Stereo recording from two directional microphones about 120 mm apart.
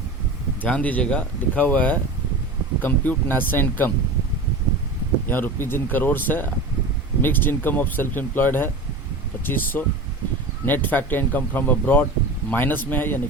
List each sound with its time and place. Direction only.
0.6 s speech: 15° left (ahead or behind)
5.3 s speech: 15° left (ahead or behind)